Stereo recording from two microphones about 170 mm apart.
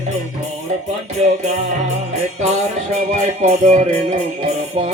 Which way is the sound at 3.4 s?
45° right (ahead or behind).